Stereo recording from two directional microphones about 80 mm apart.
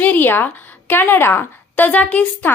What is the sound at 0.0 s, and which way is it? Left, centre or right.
A woman's voice, left.